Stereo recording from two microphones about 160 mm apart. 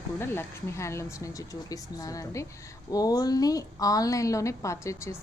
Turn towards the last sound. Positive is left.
turn(degrees=20)  # may be behind; listen again after turning